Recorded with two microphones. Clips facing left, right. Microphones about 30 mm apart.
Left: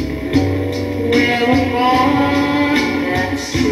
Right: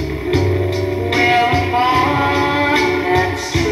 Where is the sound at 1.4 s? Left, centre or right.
Centre.